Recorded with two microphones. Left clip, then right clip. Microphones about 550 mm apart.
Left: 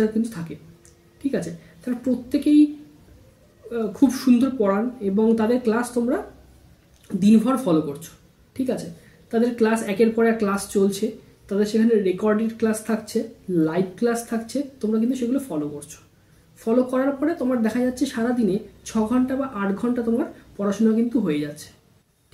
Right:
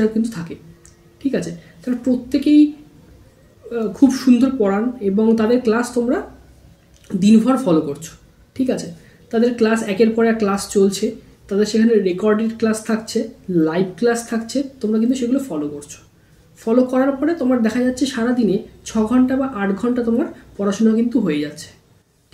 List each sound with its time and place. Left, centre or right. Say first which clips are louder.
0.0 s speech: right 4 dB; left
3.7 s speech: right 5 dB; left